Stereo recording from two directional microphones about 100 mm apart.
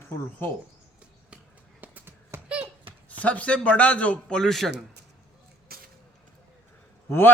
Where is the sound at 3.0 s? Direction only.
15° left (ahead or behind).